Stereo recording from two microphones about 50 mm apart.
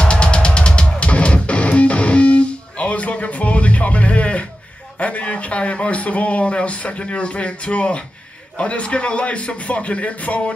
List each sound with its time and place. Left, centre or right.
0.0 s music: left
4.9 s speech: left